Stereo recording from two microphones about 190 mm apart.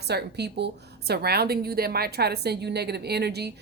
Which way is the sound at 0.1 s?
60° right (ahead or behind).